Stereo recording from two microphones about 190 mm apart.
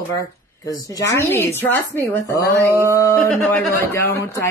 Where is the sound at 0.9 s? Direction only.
15° left (ahead or behind).